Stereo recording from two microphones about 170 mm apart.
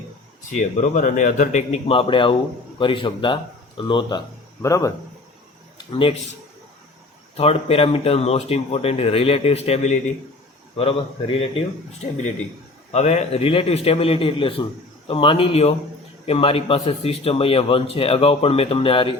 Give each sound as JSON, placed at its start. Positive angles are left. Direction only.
{"t": 0.5, "sound": "a man's voice", "side_deg": 45}
{"t": 4.6, "sound": "speech", "side_deg": 20}
{"t": 5.7, "sound": "a sound", "side_deg": 30}
{"t": 7.3, "sound": "a man's voice", "side_deg": 35}
{"t": 12.9, "sound": "a man's voice", "side_deg": 40}